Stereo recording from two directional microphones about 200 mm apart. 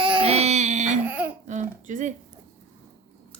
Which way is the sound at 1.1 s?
10° right (ahead or behind).